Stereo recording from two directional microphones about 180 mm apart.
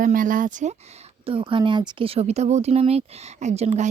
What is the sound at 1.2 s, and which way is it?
Speech, 30° right (ahead or behind).